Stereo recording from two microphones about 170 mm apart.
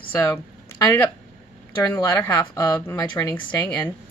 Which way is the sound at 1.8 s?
15° left (ahead or behind).